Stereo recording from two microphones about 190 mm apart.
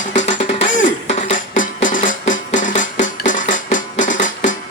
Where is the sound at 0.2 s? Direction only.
40° left (ahead or behind).